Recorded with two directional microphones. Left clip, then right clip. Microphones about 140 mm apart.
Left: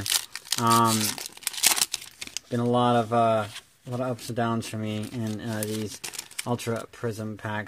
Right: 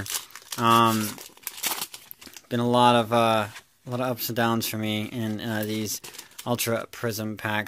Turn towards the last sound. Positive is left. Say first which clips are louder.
# right 4 dB
turn(degrees=-25)  # may be behind; listen again after turning